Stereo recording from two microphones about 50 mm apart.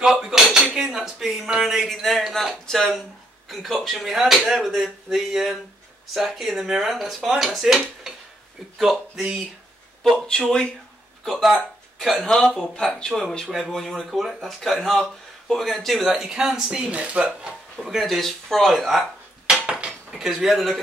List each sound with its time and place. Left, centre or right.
0.0 s dishes: centre
0.9 s a woman's voice: centre
10.1 s speech: centre
11.2 s speech: centre
12.1 s speech: centre
16.3 s a woman's voice: centre
17.7 s speech: centre
19.6 s cutlery: centre
20.2 s speech: centre